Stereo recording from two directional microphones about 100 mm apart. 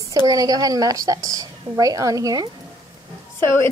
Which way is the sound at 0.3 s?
40° right (ahead or behind).